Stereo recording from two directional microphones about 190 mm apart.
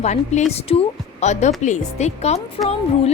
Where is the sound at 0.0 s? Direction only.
35° left (ahead or behind).